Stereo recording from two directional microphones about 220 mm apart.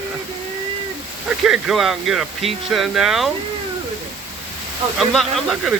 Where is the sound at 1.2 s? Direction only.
5° right (ahead or behind).